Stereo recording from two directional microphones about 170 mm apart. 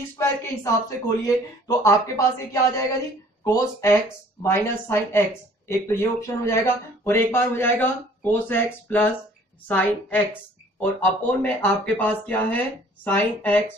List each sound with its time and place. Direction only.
0.2 s speech: 20° left (ahead or behind)